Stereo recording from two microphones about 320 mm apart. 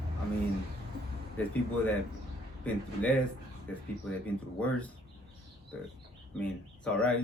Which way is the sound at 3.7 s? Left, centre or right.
Centre.